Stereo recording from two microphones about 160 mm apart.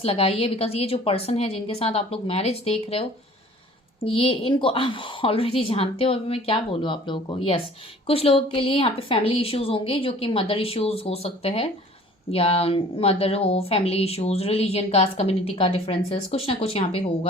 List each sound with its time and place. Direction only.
0.0 s a woman's voice: 35° left (ahead or behind)